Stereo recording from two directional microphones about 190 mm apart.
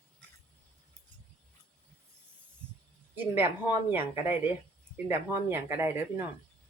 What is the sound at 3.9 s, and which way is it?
Speech, 10° right (ahead or behind).